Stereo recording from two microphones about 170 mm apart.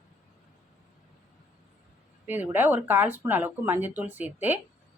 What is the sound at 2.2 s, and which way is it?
Speech, 10° right (ahead or behind).